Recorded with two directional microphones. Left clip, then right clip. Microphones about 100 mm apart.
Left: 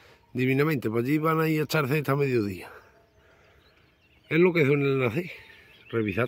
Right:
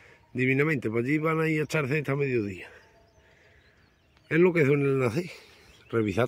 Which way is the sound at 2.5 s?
55° left (ahead or behind).